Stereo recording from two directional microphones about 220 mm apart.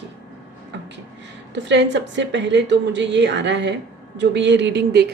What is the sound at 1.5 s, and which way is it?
A woman's voice, 55° right (ahead or behind).